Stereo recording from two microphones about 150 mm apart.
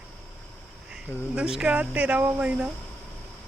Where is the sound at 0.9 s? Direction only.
5° right (ahead or behind).